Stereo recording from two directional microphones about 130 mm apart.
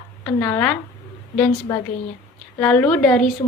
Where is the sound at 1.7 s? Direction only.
20° left (ahead or behind).